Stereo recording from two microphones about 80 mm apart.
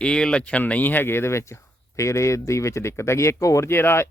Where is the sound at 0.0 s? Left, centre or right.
Centre.